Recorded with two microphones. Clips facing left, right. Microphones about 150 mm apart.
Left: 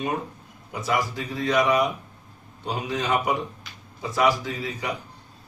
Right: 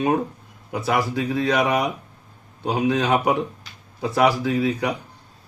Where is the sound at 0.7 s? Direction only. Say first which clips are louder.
Right 4 dB; 65° right (ahead or behind).